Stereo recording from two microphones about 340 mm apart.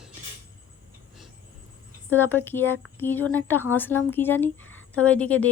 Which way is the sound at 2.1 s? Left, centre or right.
Centre.